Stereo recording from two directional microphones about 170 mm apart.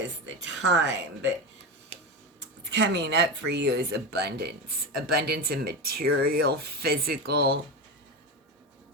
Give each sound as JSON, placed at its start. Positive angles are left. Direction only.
{"t": 0.5, "sound": "speech", "side_deg": -90}
{"t": 2.6, "sound": "speech", "side_deg": -90}